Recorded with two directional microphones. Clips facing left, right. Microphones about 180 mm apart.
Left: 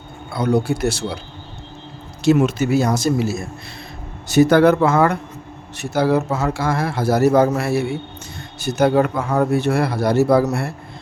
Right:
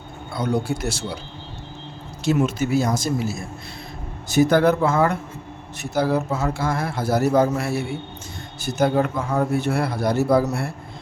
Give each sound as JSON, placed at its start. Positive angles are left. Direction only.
{"t": 0.3, "sound": "speech", "side_deg": 65}
{"t": 2.2, "sound": "a man's voice", "side_deg": 75}